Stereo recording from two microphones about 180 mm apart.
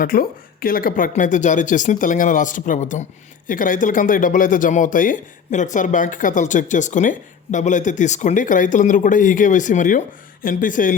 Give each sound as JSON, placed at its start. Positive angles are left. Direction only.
{"t": 0.0, "sound": "speech", "side_deg": 55}